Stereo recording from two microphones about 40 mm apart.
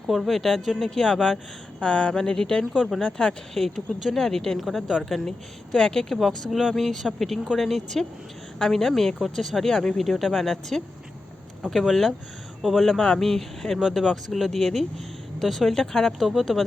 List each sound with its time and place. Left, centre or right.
0.1 s speech: centre
1.8 s speech: left
2.7 s speech: centre
3.0 s speech: left
3.5 s speech: centre
4.6 s speech: centre
6.1 s speech: centre
10.0 s speech: centre
13.0 s speech: centre
16.2 s speech: centre